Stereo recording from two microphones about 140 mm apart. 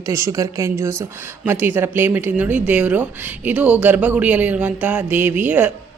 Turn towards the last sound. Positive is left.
turn(degrees=-10)  # may be behind; listen again after turning